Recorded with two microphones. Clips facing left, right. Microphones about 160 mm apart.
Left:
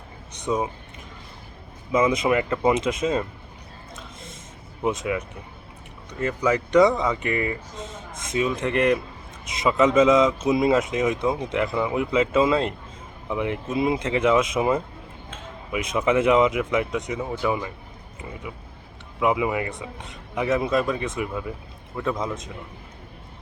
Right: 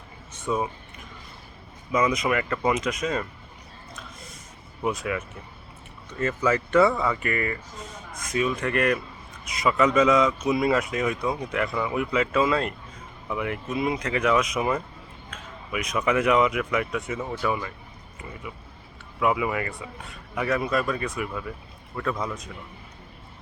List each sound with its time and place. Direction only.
0.4 s speech: 20° left (ahead or behind)
1.9 s speech: 25° left (ahead or behind)
3.9 s a sound: 25° left (ahead or behind)
4.8 s speech: 20° left (ahead or behind)
19.2 s speech: 20° left (ahead or behind)